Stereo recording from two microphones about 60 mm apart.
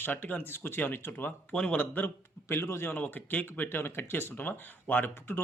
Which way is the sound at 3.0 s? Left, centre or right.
Left.